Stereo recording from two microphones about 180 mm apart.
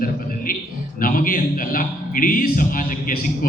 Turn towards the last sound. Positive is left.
turn(degrees=50)  # may be behind; listen again after turning